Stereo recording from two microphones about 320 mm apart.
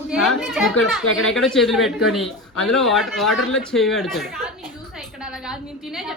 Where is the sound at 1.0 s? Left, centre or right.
Left.